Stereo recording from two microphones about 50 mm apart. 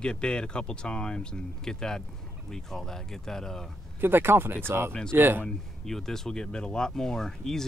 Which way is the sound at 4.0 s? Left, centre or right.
Right.